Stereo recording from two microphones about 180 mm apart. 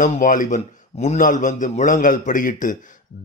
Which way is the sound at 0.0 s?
45° left (ahead or behind).